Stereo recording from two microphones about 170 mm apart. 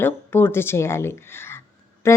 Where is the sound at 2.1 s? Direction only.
15° left (ahead or behind).